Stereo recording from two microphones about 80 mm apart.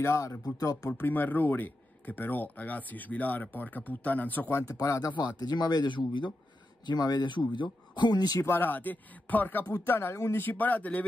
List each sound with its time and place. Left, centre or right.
0.0 s speech: left
0.6 s speech: left
1.0 s speech: left
4.6 s speech: left
5.1 s speech: left
6.9 s speech: left
8.4 s speech: left